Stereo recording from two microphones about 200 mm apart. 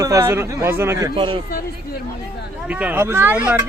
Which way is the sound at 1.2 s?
25° right (ahead or behind).